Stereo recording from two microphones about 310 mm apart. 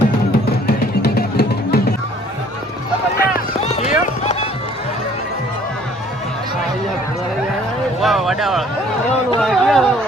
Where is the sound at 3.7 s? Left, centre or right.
Left.